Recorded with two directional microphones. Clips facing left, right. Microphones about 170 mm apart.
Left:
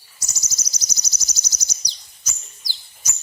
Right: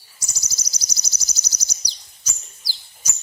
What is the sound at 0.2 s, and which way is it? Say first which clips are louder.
Bird: left 1 dB; 10° right (ahead or behind).